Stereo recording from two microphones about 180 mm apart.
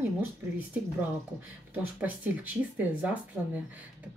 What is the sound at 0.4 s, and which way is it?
Speech, 15° right (ahead or behind).